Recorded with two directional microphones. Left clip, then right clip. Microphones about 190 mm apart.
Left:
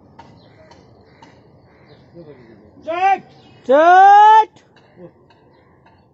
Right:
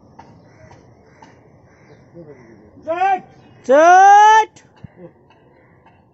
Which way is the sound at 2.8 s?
15° right (ahead or behind).